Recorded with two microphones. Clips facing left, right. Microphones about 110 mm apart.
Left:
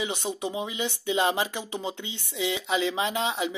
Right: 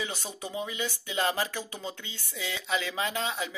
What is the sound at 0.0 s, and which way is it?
Speech, 20° left (ahead or behind).